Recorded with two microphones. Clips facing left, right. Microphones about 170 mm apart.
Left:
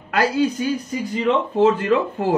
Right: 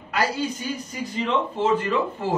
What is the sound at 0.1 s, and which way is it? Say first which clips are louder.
Speech: left 6 dB; 60° left (ahead or behind).